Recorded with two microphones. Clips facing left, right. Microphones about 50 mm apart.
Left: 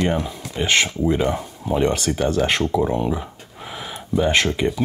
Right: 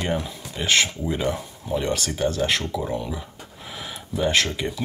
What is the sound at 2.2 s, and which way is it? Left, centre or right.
Speech, left.